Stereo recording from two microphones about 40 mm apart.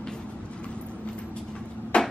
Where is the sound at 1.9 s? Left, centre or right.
Left.